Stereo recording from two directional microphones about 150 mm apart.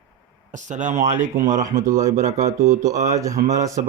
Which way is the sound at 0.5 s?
55° right (ahead or behind).